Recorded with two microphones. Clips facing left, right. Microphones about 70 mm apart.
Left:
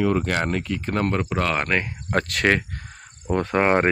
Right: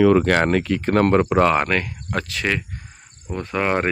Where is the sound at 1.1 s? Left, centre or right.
Right.